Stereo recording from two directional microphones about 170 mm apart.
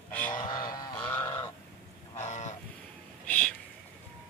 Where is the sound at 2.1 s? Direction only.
45° left (ahead or behind).